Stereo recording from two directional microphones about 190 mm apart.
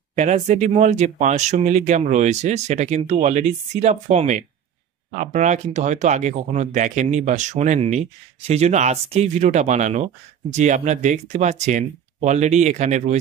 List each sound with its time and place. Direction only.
0.1 s speech: 35° right (ahead or behind)